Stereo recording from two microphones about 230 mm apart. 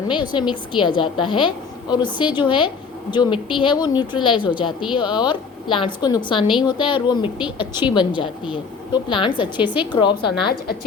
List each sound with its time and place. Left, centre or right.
0.1 s a woman's voice: centre
10.4 s a woman's voice: left